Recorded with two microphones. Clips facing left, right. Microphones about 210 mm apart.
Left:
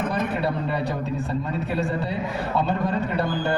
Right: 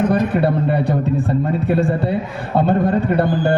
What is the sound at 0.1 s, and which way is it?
A man's voice, 55° right (ahead or behind).